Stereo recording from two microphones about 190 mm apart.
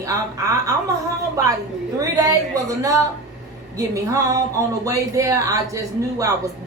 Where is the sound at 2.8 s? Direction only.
15° right (ahead or behind).